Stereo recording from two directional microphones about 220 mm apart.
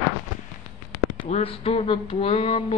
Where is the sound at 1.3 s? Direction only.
25° left (ahead or behind).